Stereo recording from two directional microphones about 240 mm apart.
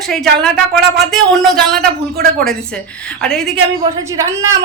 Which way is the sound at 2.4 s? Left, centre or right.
Centre.